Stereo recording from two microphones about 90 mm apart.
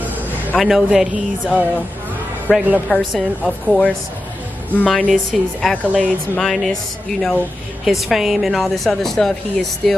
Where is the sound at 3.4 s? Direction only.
15° left (ahead or behind).